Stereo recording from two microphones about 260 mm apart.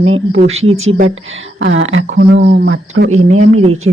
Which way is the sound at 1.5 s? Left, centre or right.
Right.